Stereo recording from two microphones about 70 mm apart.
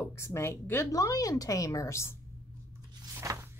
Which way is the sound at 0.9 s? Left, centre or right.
Left.